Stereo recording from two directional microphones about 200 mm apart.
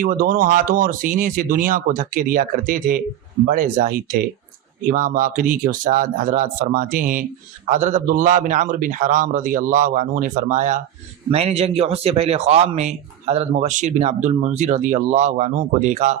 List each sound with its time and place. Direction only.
0.0 s speech: 45° right (ahead or behind)